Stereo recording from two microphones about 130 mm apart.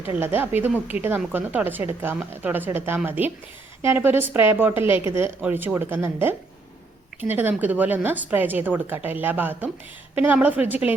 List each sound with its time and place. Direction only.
0.1 s a woman's voice: 15° right (ahead or behind)